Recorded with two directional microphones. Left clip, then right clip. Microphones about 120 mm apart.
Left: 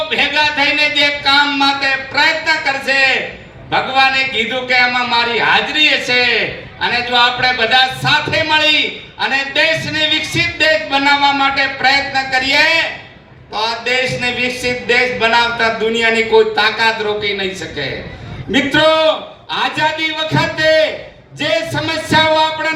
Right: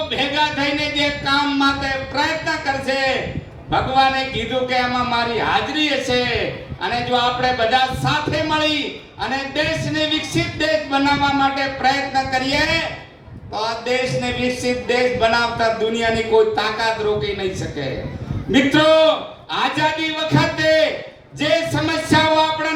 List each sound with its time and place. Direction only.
0.1 s a man's voice: 40° right (ahead or behind)